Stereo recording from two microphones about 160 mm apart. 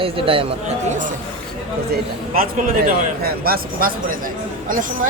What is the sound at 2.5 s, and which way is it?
A woman's voice, 55° right (ahead or behind).